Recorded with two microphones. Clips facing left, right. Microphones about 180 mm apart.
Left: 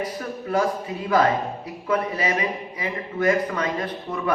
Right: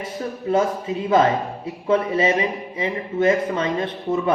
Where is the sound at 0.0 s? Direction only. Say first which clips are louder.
Right 2 dB; 25° right (ahead or behind).